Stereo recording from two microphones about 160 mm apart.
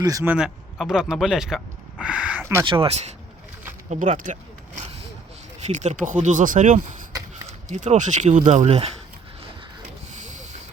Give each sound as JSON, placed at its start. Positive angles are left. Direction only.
{"t": 0.0, "sound": "speech", "side_deg": -20}
{"t": 0.3, "sound": "speech", "side_deg": -5}
{"t": 2.6, "sound": "speech", "side_deg": -35}
{"t": 5.5, "sound": "speech", "side_deg": -45}